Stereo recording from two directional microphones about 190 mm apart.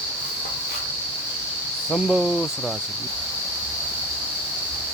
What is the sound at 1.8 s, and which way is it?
Speech, centre (ahead or behind).